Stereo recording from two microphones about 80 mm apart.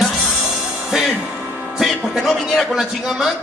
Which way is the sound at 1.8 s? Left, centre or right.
Centre.